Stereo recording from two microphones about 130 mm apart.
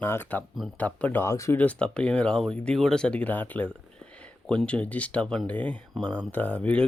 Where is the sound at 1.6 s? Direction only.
10° left (ahead or behind).